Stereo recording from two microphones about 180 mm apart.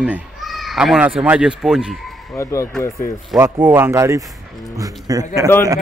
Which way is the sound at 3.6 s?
10° right (ahead or behind).